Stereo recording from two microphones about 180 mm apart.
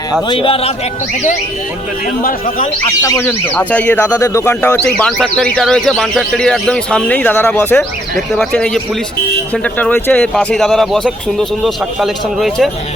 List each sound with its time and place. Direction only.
0.3 s speech: 30° left (ahead or behind)
3.0 s speech: 15° left (ahead or behind)
5.1 s speech: 5° left (ahead or behind)